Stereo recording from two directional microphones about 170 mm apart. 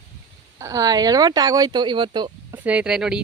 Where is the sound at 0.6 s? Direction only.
20° right (ahead or behind).